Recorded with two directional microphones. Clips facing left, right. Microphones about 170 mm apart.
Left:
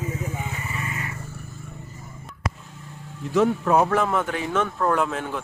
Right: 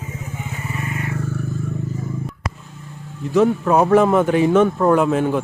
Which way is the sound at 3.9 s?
20° right (ahead or behind).